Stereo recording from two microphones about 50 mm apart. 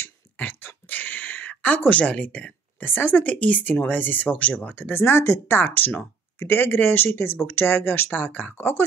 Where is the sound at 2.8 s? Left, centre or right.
Left.